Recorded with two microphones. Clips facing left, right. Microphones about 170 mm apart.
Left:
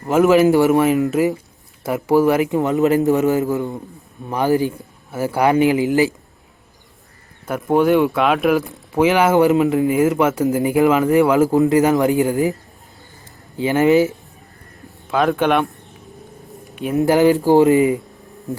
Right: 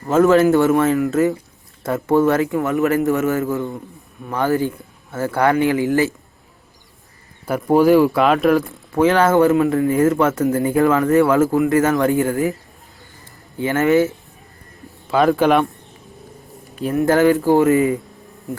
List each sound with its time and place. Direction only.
0.0 s speech: 15° left (ahead or behind)
7.4 s speech: centre (ahead or behind)
8.7 s speech: 15° left (ahead or behind)
13.6 s speech: 15° left (ahead or behind)
15.0 s speech: centre (ahead or behind)
16.9 s speech: 15° left (ahead or behind)